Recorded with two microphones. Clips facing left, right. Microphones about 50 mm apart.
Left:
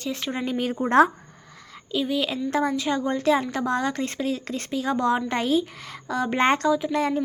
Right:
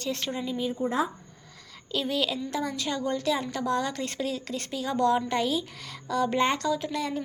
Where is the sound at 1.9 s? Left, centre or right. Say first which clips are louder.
Left 3 dB; centre.